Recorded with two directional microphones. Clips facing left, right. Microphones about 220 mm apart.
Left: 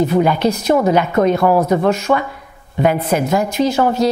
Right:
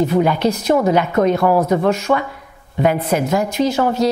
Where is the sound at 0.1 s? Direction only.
15° left (ahead or behind).